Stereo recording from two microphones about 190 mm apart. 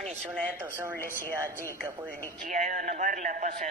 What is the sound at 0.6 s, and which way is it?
Speech, 10° right (ahead or behind).